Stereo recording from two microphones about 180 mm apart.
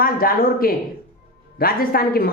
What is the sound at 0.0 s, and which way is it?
Speech, 55° left (ahead or behind).